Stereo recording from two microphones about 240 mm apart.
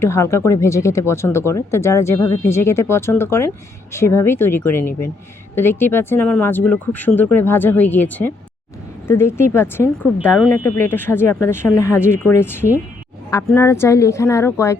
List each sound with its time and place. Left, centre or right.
0.0 s speech: centre